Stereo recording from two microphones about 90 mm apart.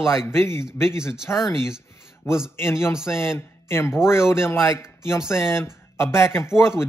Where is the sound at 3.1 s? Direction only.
30° left (ahead or behind).